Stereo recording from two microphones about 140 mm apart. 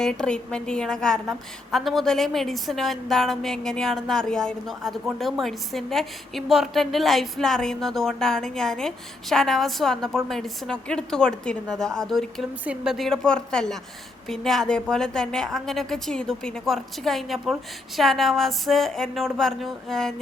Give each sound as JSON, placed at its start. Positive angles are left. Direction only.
{"t": 0.0, "sound": "a woman's voice", "side_deg": 5}